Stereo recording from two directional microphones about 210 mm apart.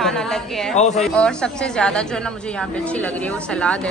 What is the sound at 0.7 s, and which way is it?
Speech, 35° left (ahead or behind).